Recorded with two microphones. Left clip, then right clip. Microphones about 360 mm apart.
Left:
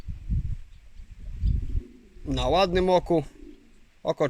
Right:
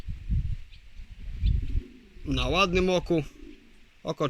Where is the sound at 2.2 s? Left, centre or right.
Left.